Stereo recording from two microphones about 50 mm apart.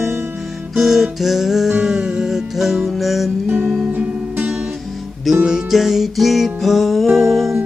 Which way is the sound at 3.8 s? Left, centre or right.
Right.